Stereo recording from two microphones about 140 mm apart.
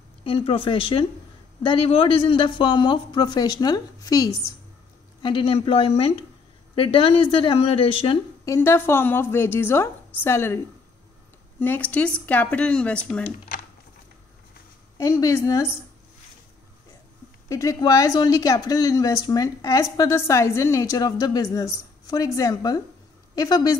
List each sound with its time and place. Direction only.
0.2 s speech: 40° left (ahead or behind); by 4.6 s 25° left (ahead or behind)
5.2 s speech: 35° left (ahead or behind)
8.5 s speech: 15° left (ahead or behind)
11.6 s speech: 10° left (ahead or behind)
15.0 s speech: 25° left (ahead or behind)
17.5 s speech: 20° left (ahead or behind)